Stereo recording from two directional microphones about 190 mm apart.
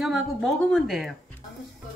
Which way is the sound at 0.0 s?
Centre (ahead or behind).